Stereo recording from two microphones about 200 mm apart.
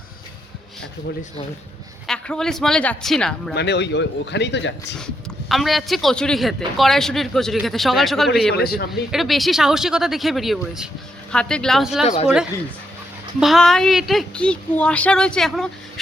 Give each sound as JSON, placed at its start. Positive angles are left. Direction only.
{"t": 2.0, "sound": "speech", "side_deg": 5}
{"t": 3.5, "sound": "speech", "side_deg": 55}
{"t": 4.9, "sound": "speech", "side_deg": 0}
{"t": 8.5, "sound": "a man's voice", "side_deg": 50}
{"t": 8.9, "sound": "speech", "side_deg": 0}
{"t": 12.0, "sound": "speech", "side_deg": 30}
{"t": 13.4, "sound": "speech", "side_deg": 0}